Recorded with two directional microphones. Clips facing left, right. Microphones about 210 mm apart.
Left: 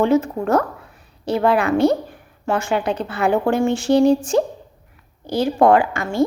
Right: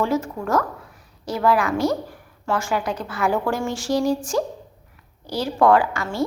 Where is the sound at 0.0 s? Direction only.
20° left (ahead or behind).